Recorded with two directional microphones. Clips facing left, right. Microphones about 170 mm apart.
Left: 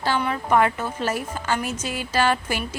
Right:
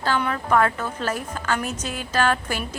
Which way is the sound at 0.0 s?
10° left (ahead or behind).